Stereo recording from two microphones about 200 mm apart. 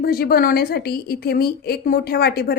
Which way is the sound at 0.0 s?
50° left (ahead or behind).